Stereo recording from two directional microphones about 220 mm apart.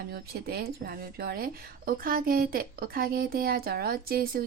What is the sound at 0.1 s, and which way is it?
A woman's voice, 45° right (ahead or behind).